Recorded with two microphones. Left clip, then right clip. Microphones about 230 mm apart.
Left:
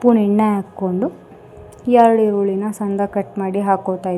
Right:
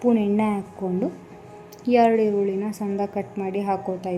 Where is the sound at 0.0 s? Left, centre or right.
Centre.